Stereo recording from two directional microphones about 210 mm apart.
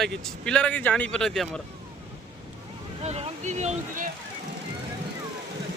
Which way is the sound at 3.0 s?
30° right (ahead or behind).